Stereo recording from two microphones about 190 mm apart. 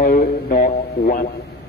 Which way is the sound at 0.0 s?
50° left (ahead or behind).